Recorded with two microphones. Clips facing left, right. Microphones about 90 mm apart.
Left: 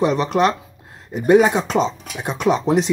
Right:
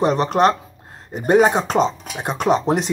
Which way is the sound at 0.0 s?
40° right (ahead or behind).